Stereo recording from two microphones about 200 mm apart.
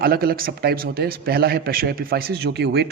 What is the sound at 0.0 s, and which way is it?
A man's voice, 50° right (ahead or behind).